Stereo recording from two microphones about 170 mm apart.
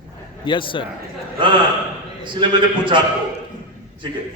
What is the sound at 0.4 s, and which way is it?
Speech, 30° left (ahead or behind).